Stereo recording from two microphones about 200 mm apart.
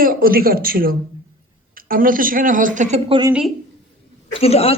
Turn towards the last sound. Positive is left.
turn(degrees=30)  # may be behind; listen again after turning